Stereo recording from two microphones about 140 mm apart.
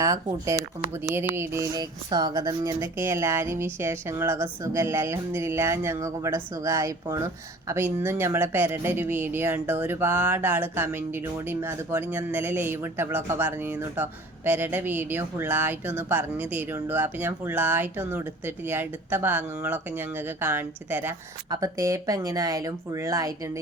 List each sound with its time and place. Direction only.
0.0 s speech: 25° right (ahead or behind)